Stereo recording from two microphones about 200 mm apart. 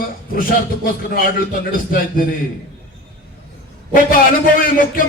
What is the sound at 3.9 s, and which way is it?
A man's voice, 45° left (ahead or behind).